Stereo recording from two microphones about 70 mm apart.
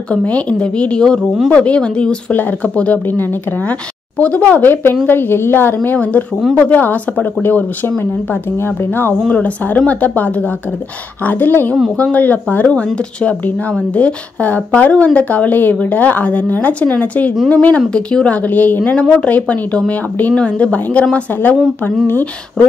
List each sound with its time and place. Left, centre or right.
0.1 s speech: centre
3.1 s a woman's voice: left
5.9 s a woman's voice: left
9.3 s speech: left
22.6 s speech: centre